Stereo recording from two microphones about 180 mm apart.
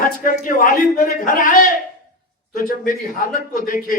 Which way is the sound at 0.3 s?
50° left (ahead or behind).